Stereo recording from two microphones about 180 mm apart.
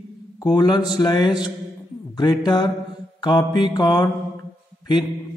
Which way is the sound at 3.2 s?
25° left (ahead or behind).